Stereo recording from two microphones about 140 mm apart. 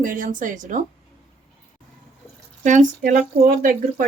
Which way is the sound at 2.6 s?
65° right (ahead or behind).